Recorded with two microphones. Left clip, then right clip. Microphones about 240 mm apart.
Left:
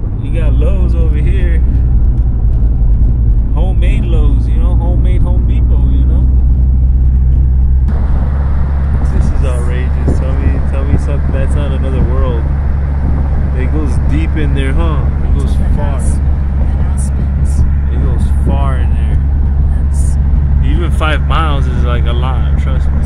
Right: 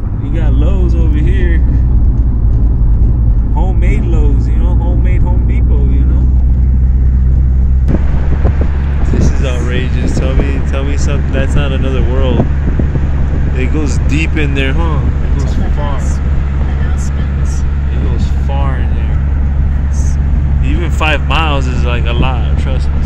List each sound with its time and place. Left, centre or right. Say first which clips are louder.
9.4 s vehicle: right 3 dB; centre
11.1 s speech: right 3 dB; centre
13.6 s speech: right 3 dB; centre
20.8 s speech: right 3 dB; centre